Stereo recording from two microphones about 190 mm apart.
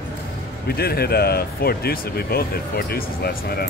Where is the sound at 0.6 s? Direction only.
55° left (ahead or behind).